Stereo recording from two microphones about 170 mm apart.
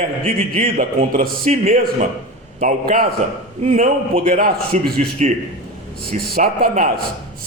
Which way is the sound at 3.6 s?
40° right (ahead or behind).